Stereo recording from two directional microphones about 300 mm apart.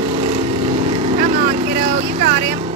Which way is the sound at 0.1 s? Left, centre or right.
Right.